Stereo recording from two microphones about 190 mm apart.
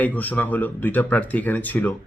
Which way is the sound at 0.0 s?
10° left (ahead or behind).